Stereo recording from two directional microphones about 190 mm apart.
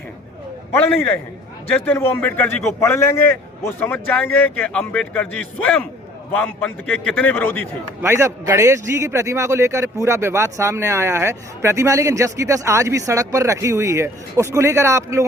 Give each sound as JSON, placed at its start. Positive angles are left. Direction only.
{"t": 0.7, "sound": "speech", "side_deg": 10}
{"t": 8.0, "sound": "a man's voice", "side_deg": -15}